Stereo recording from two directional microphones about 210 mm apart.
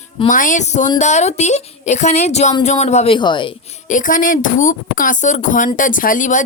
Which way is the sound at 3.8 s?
35° left (ahead or behind).